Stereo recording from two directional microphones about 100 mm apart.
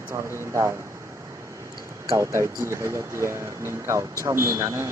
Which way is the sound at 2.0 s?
30° right (ahead or behind).